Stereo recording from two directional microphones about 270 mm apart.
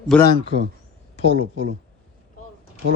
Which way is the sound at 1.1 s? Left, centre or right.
Left.